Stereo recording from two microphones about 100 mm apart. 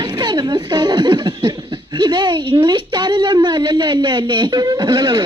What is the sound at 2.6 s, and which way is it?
Speech, 50° right (ahead or behind).